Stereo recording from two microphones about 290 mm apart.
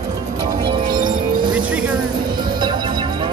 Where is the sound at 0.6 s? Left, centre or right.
Centre.